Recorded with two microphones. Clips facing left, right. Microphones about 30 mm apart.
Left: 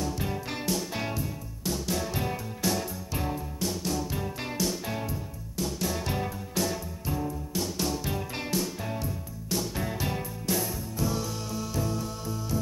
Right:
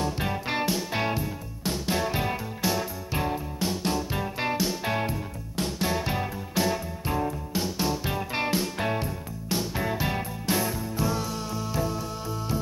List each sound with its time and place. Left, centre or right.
0.0 s music: right
5.6 s music: right
5.9 s music: right
6.6 s music: right
8.7 s music: right
9.5 s music: right